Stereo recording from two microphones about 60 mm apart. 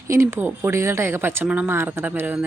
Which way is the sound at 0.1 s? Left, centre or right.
Right.